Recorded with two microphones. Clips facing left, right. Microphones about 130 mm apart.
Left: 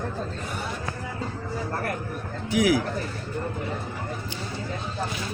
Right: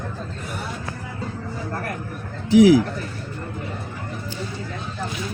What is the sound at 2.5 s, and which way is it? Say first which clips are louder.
Speech: right 9 dB; 30° right (ahead or behind).